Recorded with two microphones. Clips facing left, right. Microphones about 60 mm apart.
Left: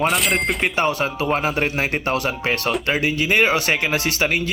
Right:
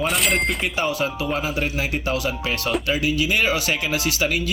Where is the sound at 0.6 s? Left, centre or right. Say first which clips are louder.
Left 3 dB; left.